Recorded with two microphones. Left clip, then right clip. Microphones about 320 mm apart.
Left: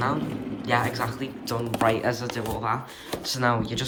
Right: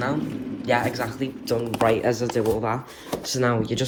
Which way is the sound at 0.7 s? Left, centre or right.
Centre.